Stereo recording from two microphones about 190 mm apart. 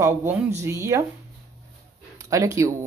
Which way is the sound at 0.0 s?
15° right (ahead or behind).